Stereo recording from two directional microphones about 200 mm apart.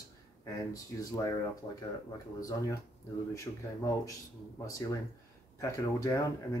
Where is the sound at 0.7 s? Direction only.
15° left (ahead or behind).